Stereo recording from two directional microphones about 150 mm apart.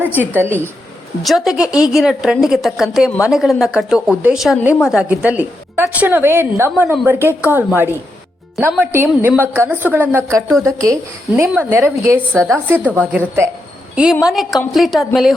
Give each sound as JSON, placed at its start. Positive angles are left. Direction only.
{"t": 0.0, "sound": "a woman's voice", "side_deg": -10}
{"t": 1.2, "sound": "a woman's voice", "side_deg": 0}
{"t": 12.3, "sound": "a woman's voice", "side_deg": 5}
{"t": 12.8, "sound": "a woman's voice", "side_deg": -10}